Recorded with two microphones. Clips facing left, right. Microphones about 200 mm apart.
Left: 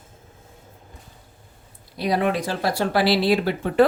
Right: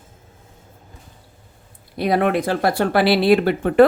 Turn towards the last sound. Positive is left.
turn(degrees=-55)  # may be behind; listen again after turning